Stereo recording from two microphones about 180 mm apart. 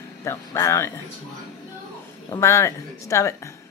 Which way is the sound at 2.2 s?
15° left (ahead or behind).